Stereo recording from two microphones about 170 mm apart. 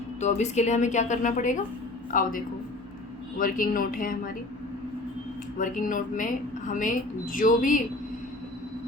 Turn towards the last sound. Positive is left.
turn(degrees=50)  # may be behind; listen again after turning